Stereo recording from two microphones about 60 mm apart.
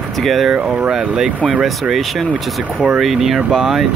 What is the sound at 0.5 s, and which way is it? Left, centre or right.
Speech, centre.